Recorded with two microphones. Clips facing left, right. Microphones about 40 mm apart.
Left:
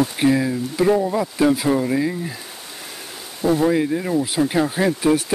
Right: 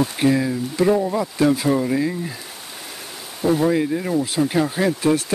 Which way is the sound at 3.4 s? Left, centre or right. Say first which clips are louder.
Left 1 dB; centre.